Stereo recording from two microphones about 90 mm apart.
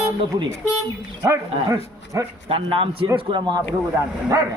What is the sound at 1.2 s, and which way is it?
Speech, 35° right (ahead or behind).